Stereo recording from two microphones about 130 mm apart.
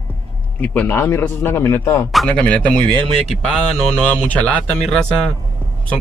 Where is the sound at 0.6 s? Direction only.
15° left (ahead or behind).